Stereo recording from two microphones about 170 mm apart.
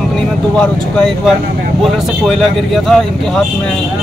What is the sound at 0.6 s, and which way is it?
Speech, 5° left (ahead or behind).